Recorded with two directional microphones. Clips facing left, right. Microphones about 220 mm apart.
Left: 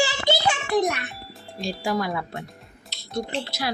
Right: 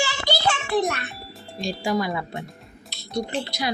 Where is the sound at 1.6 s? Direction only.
Centre (ahead or behind).